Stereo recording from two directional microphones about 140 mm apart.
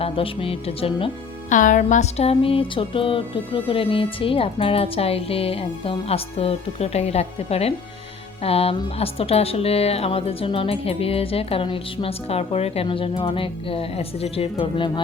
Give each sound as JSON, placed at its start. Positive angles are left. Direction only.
{"t": 0.0, "sound": "music", "side_deg": 40}
{"t": 1.5, "sound": "music", "side_deg": 65}
{"t": 14.6, "sound": "speech", "side_deg": 35}